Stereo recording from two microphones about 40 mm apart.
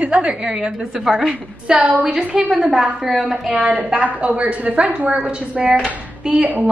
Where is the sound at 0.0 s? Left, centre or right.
Right; by 3.5 s centre.